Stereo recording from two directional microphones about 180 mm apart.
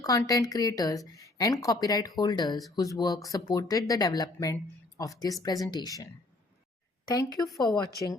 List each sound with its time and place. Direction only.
0.0 s speech: 20° left (ahead or behind)
7.4 s a woman's voice: centre (ahead or behind)